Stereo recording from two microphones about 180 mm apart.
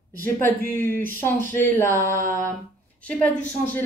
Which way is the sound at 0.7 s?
10° left (ahead or behind).